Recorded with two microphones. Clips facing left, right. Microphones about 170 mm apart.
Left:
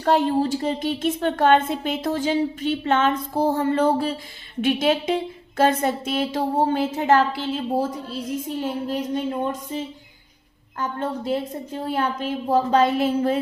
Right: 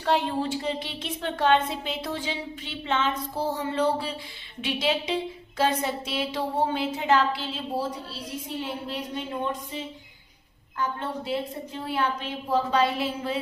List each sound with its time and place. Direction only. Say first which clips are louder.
0.0 s a woman's voice: left 6 dB; 45° left (ahead or behind)